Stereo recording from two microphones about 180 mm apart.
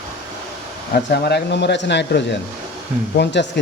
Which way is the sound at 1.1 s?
65° left (ahead or behind).